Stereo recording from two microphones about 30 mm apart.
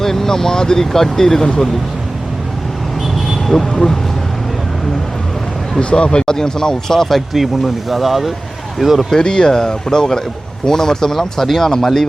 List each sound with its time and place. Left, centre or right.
0.0 s speech: centre
3.6 s speech: centre
5.8 s speech: left; by 7.2 s centre
7.3 s speech: centre
9.1 s speech: left